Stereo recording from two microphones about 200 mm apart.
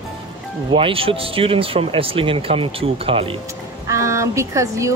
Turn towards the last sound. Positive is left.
turn(degrees=-15)  # may be behind; listen again after turning